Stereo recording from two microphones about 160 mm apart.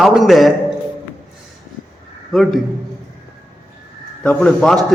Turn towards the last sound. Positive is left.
turn(degrees=5)  # may be behind; listen again after turning